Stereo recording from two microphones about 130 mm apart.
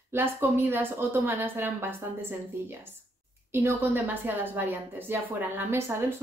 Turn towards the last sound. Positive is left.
turn(degrees=-15)  # may be behind; listen again after turning